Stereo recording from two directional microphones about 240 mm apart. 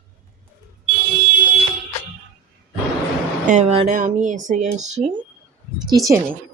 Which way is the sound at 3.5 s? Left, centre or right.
Right.